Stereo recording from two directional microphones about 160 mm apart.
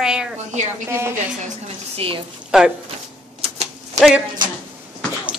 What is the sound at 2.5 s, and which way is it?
Speech, 5° right (ahead or behind).